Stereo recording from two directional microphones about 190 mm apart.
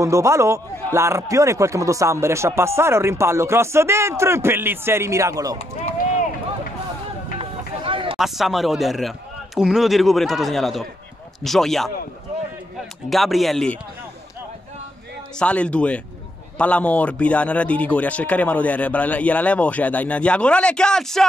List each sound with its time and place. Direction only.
0.0 s speech: 15° right (ahead or behind)
7.3 s a sound: 30° right (ahead or behind)
8.2 s a man's voice: centre (ahead or behind)
13.1 s a man's voice: centre (ahead or behind)
15.3 s speech: 5° left (ahead or behind)